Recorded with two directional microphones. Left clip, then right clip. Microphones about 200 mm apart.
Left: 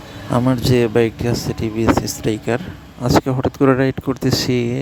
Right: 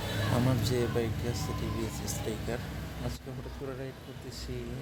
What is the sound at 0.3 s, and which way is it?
Speech, 45° left (ahead or behind).